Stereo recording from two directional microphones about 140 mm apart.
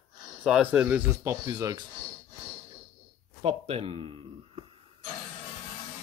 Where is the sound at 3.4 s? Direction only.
45° right (ahead or behind).